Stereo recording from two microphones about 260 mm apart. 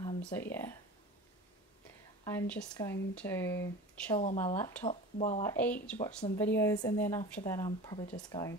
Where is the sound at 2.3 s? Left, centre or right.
Centre.